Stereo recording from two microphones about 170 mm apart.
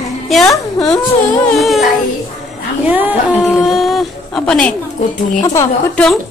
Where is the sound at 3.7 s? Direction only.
Centre (ahead or behind).